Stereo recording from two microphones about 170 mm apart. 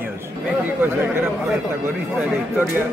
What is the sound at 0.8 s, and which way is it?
Speech, 10° right (ahead or behind).